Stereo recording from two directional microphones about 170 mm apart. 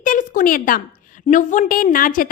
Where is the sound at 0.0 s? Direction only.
50° left (ahead or behind).